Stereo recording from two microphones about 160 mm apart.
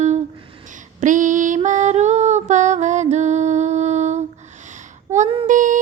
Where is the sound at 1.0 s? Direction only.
50° right (ahead or behind).